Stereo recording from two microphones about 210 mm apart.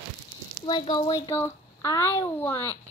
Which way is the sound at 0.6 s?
25° left (ahead or behind).